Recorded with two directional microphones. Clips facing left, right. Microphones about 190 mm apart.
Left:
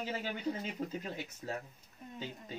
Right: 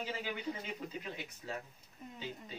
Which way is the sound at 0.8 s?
40° left (ahead or behind).